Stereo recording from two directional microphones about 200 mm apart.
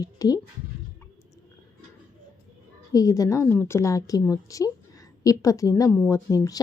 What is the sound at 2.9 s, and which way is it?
A woman's voice, 15° left (ahead or behind).